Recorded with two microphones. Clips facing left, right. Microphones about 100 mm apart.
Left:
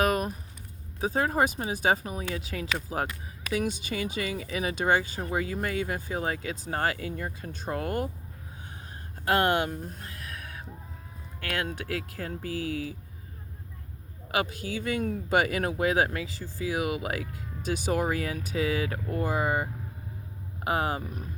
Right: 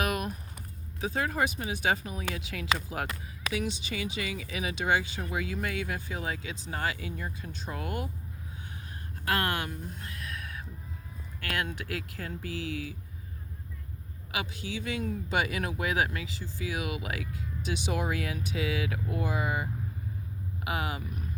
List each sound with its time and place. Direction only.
0.0 s a sound: 40° left (ahead or behind)
1.0 s speech: 40° left (ahead or behind)
3.5 s speech: 50° left (ahead or behind)
9.2 s speech: 30° left (ahead or behind)
9.6 s a sound: 35° left (ahead or behind)
11.6 s speech: 35° left (ahead or behind)
14.3 s speech: 45° left (ahead or behind)
20.7 s speech: 40° left (ahead or behind)